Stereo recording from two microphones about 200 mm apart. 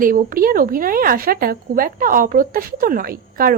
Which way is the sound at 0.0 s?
45° right (ahead or behind).